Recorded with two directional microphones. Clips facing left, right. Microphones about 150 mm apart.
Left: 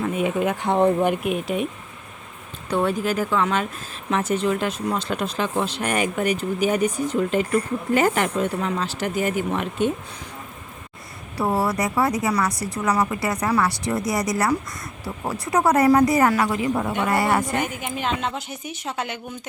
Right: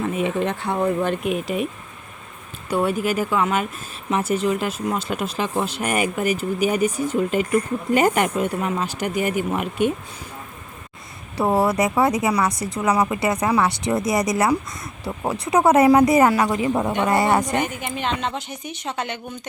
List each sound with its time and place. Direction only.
0.0 s a woman's voice: centre (ahead or behind); by 1.0 s 25° left (ahead or behind)
1.0 s speech: 5° left (ahead or behind)
2.6 s speech: 10° right (ahead or behind)
11.3 s speech: 25° right (ahead or behind)
17.6 s a woman's voice: 5° left (ahead or behind)